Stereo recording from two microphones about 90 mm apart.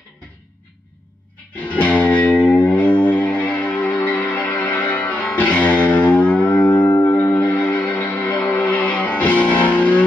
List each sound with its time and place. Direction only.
1.7 s music: 15° left (ahead or behind)